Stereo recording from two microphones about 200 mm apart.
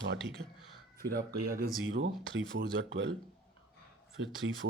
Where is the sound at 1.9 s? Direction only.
65° right (ahead or behind).